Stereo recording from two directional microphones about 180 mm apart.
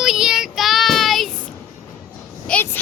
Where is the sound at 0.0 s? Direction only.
Centre (ahead or behind).